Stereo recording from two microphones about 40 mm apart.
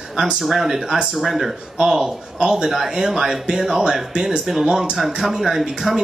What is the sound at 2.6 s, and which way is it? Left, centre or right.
Speech, centre.